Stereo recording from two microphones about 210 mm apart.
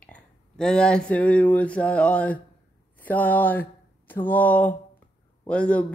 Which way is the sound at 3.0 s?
10° left (ahead or behind).